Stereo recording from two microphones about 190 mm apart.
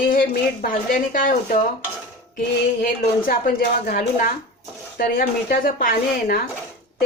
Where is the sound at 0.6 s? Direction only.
45° left (ahead or behind).